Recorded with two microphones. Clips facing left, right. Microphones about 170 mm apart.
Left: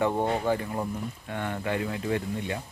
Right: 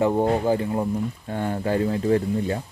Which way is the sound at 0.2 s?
30° right (ahead or behind).